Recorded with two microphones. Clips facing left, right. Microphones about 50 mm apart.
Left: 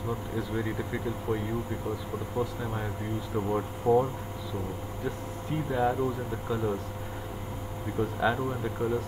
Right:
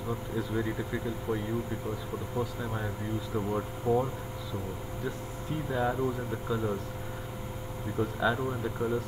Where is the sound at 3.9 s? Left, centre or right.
Left.